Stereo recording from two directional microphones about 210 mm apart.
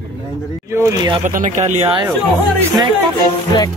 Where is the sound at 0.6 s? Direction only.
15° right (ahead or behind).